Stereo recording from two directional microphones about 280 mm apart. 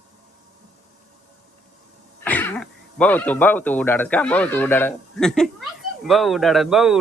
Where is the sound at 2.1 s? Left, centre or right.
Centre.